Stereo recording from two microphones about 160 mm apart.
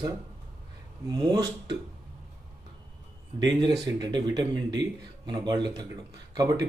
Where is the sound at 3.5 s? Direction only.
30° right (ahead or behind).